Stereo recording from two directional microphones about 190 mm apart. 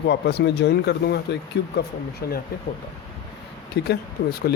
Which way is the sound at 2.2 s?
55° left (ahead or behind).